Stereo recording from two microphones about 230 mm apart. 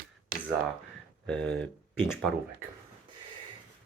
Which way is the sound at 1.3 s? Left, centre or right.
Centre.